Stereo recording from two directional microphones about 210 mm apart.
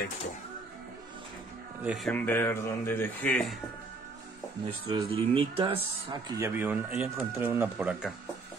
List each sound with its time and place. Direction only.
1.8 s speech: centre (ahead or behind)
4.6 s speech: 25° right (ahead or behind); by 8.1 s 10° right (ahead or behind)